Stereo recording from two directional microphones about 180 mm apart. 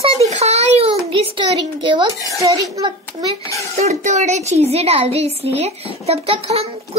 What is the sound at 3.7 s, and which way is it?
A woman's voice, 40° right (ahead or behind).